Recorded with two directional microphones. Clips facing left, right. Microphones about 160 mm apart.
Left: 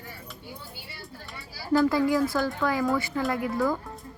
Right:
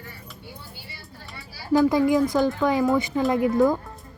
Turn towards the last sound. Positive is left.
turn(degrees=-20)  # may be behind; listen again after turning